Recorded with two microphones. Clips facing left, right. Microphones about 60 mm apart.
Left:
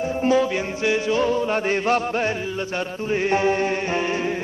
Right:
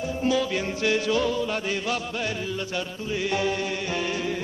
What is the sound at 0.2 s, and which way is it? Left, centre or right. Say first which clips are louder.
Music: left 5 dB; left.